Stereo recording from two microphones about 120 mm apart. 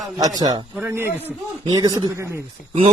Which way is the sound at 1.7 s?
35° right (ahead or behind).